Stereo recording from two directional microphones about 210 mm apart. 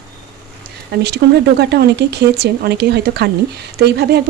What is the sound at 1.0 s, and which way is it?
Speech, 50° right (ahead or behind).